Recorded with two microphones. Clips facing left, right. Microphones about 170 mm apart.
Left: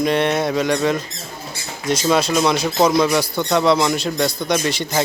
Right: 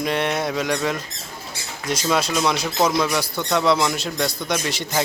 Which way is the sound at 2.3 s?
5° left (ahead or behind).